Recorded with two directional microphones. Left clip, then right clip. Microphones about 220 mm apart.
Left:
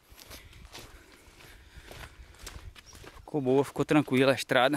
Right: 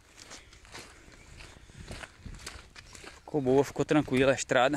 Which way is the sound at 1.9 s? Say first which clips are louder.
Right 3 dB; 35° right (ahead or behind).